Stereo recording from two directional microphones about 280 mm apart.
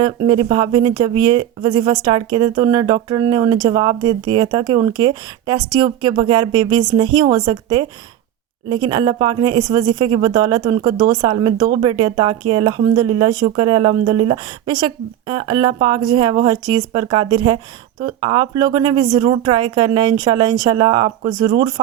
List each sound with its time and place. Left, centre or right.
0.3 s speech: centre